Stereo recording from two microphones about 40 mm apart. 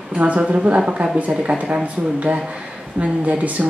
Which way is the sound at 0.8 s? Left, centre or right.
Centre.